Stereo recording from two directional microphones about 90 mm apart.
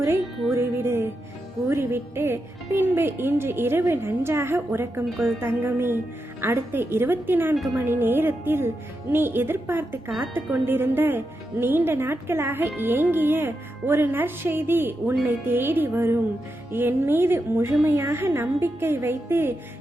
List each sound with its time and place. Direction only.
0.5 s music: 25° right (ahead or behind)
1.6 s speech: 25° right (ahead or behind)
7.5 s a woman's voice: centre (ahead or behind)
7.8 s speech: 25° right (ahead or behind)